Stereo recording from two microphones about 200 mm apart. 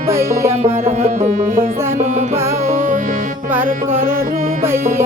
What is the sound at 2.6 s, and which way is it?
Music, 35° right (ahead or behind).